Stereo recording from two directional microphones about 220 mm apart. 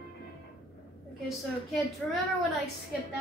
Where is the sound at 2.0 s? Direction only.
5° left (ahead or behind).